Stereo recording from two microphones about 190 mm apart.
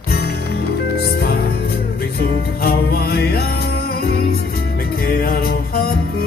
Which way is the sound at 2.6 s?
55° left (ahead or behind).